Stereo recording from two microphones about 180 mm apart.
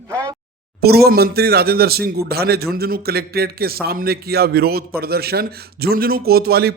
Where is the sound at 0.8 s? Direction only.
60° right (ahead or behind).